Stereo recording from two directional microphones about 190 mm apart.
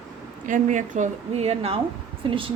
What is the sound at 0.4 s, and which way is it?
A woman's voice, 45° right (ahead or behind).